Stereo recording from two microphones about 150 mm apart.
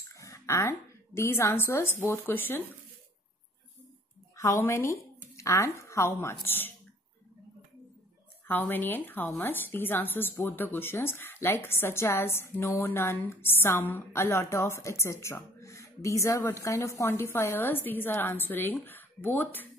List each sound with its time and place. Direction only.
0.1 s a woman's voice: 20° left (ahead or behind)
4.4 s a woman's voice: 20° left (ahead or behind)
8.5 s speech: 15° left (ahead or behind)